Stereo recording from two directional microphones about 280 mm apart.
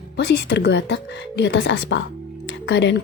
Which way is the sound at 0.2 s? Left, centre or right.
Left.